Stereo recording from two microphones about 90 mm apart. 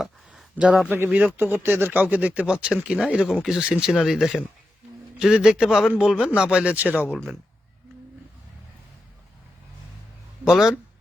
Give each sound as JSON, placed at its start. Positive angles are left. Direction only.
{"t": 0.5, "sound": "speech", "side_deg": -15}
{"t": 10.4, "sound": "speech", "side_deg": -5}